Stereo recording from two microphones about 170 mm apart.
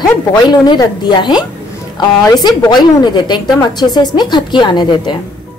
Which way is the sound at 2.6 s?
25° left (ahead or behind).